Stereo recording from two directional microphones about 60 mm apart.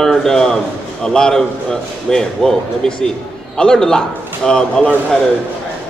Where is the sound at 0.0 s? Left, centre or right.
Centre.